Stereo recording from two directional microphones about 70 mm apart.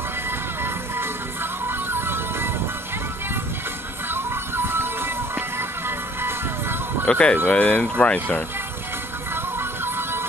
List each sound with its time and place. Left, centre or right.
0.9 s music: right
4.1 s music: right
7.1 s speech: centre
9.3 s music: right